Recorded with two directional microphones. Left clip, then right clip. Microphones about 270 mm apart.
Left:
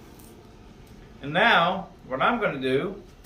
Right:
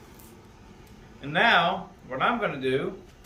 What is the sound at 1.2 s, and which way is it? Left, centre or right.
Speech, centre.